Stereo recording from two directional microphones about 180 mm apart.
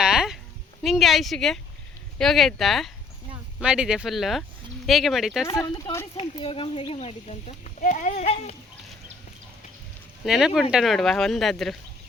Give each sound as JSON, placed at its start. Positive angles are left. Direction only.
{"t": 0.0, "sound": "a sound", "side_deg": -5}
{"t": 0.8, "sound": "speech", "side_deg": 0}
{"t": 5.5, "sound": "speech", "side_deg": 20}
{"t": 6.1, "sound": "speech", "side_deg": 30}
{"t": 10.2, "sound": "speech", "side_deg": 0}